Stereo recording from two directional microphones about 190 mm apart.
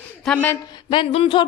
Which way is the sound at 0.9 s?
30° left (ahead or behind).